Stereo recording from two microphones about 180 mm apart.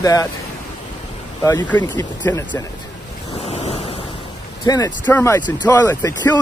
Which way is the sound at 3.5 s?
35° left (ahead or behind).